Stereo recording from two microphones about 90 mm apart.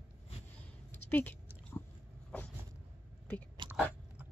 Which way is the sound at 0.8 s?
20° left (ahead or behind).